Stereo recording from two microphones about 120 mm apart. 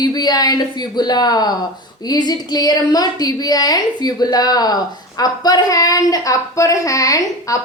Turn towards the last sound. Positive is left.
turn(degrees=30)  # may be behind; listen again after turning